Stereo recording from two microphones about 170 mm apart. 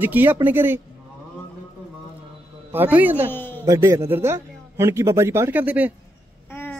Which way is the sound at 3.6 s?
15° right (ahead or behind).